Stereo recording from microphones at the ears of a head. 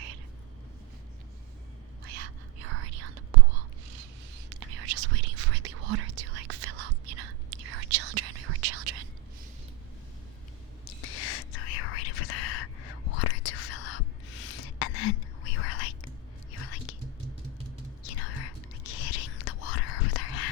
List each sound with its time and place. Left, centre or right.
2.0 s whispering: right
10.8 s whispering: left
18.0 s whispering: left